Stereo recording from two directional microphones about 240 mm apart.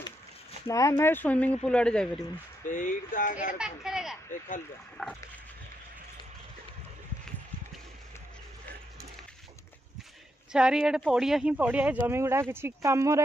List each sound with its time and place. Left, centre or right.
0.7 s speech: centre
2.7 s speech: left
3.5 s speech: centre
10.5 s speech: centre